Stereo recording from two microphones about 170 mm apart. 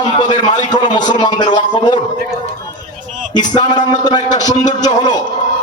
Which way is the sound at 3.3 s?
25° left (ahead or behind).